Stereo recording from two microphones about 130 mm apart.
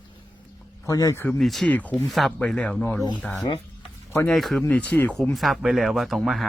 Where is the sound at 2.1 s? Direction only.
Centre (ahead or behind).